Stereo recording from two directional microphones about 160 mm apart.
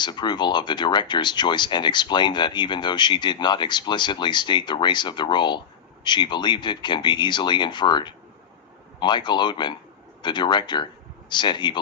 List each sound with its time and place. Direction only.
0.0 s speech: 30° left (ahead or behind)